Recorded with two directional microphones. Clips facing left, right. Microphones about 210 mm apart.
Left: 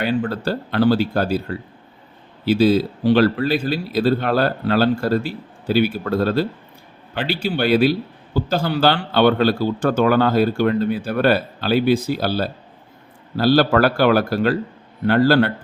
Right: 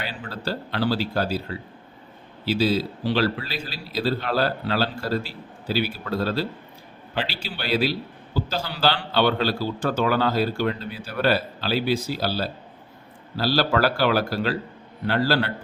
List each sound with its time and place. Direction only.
0.0 s a man's voice: 55° left (ahead or behind)